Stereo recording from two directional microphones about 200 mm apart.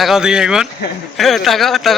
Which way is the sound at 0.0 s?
Centre (ahead or behind).